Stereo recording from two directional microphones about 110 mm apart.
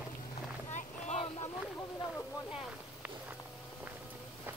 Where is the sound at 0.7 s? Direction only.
80° left.